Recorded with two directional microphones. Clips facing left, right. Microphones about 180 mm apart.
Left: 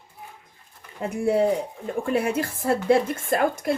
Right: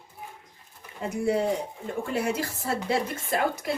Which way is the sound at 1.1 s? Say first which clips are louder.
Left 4 dB; 55° left (ahead or behind).